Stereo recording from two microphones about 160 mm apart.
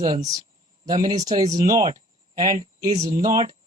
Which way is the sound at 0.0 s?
25° right (ahead or behind).